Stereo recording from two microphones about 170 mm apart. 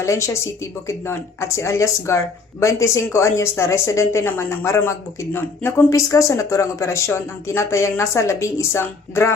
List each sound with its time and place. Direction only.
0.0 s speech: 15° left (ahead or behind)